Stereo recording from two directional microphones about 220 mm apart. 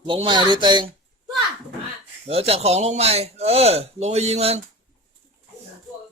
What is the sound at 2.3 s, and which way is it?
Speech, 25° right (ahead or behind).